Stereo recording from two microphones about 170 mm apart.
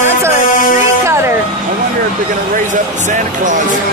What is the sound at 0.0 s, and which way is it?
Music, 15° right (ahead or behind).